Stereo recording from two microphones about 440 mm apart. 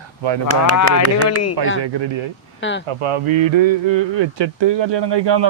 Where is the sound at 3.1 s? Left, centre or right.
Right.